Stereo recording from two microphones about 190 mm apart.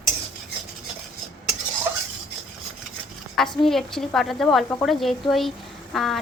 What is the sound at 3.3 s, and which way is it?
A woman's voice, centre (ahead or behind).